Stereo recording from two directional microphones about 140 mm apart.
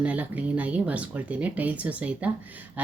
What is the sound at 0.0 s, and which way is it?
Speech, 10° right (ahead or behind).